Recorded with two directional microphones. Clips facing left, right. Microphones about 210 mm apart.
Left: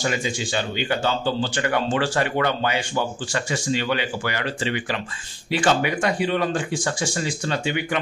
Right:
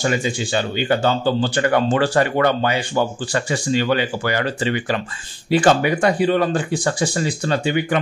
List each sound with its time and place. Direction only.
0.8 s speech: 45° right (ahead or behind)